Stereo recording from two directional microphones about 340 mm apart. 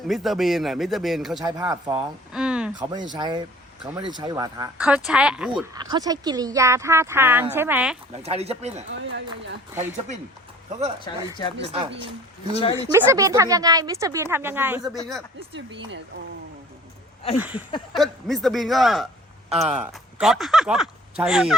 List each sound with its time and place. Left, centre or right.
0.1 s speech: centre
8.1 s speech: centre
8.9 s speech: right
11.1 s speech: centre
11.6 s speech: centre
12.5 s speech: centre
12.9 s speech: centre
17.3 s speech: centre